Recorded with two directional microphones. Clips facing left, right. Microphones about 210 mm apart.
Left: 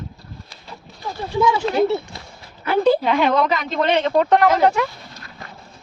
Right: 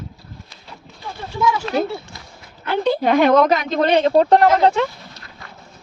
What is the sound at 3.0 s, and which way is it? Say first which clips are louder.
Speech: right 4 dB; 45° right (ahead or behind).